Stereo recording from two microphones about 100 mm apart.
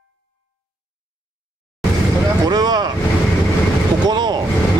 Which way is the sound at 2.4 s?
45° right (ahead or behind).